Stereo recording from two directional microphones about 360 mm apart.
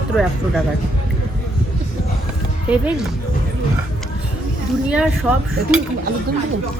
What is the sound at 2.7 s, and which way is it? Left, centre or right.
Speech, centre.